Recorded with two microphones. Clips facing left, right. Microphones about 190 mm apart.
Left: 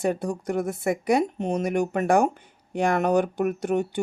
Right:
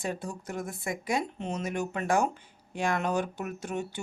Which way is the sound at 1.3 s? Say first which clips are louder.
Left 8 dB; 50° left (ahead or behind).